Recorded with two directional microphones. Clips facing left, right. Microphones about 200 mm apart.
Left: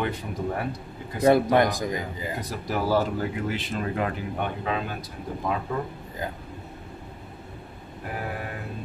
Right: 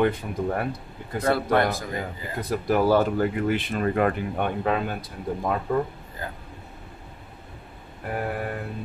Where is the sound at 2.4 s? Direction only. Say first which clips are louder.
Right 8 dB; 55° right (ahead or behind).